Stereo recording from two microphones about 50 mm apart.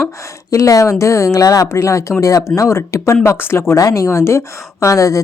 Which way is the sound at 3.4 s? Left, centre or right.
Left.